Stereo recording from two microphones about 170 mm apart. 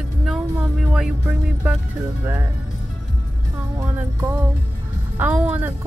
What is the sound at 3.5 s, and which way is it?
Speech, 15° right (ahead or behind).